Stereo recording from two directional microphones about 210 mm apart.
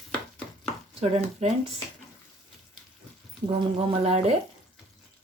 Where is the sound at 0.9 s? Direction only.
30° right (ahead or behind).